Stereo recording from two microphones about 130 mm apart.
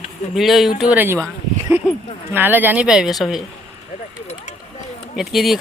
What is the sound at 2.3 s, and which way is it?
Speech, 15° right (ahead or behind).